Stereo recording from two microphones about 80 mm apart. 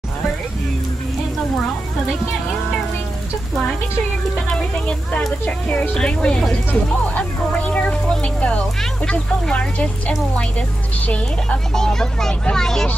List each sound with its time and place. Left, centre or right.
4.5 s speech: centre